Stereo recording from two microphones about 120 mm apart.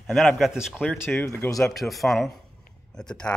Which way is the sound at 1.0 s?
20° left (ahead or behind).